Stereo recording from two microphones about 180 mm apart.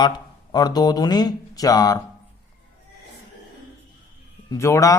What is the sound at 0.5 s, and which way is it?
Speech, 20° left (ahead or behind).